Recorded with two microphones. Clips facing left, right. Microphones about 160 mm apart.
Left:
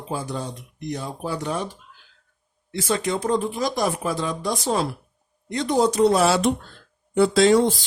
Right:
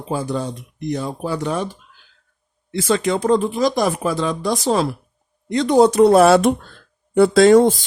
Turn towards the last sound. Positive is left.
turn(degrees=-50)  # may be behind; listen again after turning